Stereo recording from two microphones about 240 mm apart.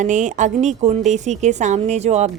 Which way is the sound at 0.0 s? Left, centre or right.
Right.